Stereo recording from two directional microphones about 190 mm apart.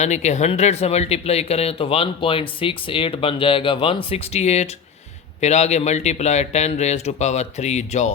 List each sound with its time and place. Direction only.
0.0 s a man's voice: 35° left (ahead or behind)